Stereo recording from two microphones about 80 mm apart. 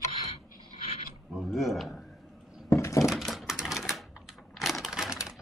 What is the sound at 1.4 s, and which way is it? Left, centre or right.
Speech, centre.